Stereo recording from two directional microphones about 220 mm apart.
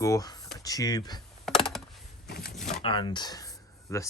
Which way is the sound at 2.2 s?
45° left (ahead or behind).